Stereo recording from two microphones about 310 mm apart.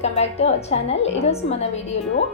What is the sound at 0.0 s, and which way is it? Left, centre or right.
A woman's voice, centre.